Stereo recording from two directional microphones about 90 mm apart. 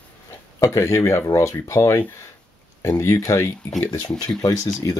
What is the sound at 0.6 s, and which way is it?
Speech, 35° left (ahead or behind).